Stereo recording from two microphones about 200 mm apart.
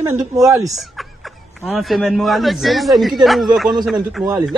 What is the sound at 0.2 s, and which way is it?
Speech, 15° right (ahead or behind).